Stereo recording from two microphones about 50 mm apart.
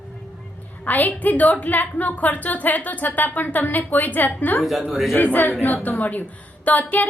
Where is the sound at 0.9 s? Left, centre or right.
Left.